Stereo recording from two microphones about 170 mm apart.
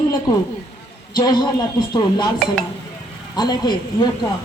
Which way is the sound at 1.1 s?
25° left (ahead or behind).